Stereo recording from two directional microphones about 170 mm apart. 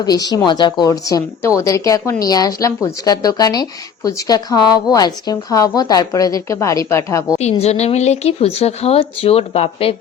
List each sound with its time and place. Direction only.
0.0 s speech: 25° left (ahead or behind)
7.6 s speech: 40° left (ahead or behind)